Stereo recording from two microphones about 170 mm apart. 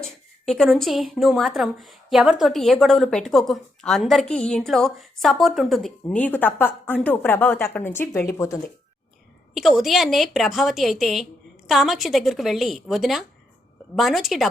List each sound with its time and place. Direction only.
0.0 s a woman's voice: centre (ahead or behind); by 8.7 s 20° left (ahead or behind)
9.6 s a woman's voice: centre (ahead or behind)